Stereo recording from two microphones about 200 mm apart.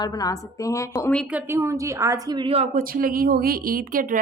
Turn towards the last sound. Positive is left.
turn(degrees=-45)  # may be behind; listen again after turning